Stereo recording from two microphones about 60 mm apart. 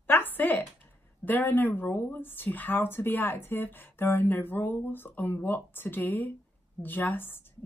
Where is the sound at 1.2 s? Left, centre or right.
Left.